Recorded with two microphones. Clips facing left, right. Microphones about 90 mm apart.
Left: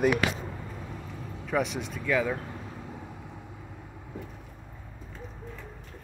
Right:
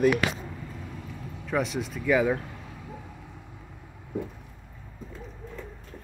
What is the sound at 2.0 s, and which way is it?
Speech, 15° right (ahead or behind).